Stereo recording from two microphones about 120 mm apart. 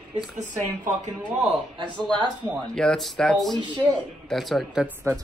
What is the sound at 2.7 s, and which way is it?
A man's voice, 5° left (ahead or behind).